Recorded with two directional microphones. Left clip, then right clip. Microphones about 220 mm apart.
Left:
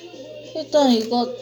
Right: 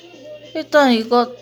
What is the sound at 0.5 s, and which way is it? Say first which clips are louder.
Speech: right 4 dB; 40° right (ahead or behind).